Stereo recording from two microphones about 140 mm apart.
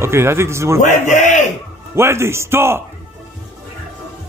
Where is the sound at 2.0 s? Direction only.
20° right (ahead or behind).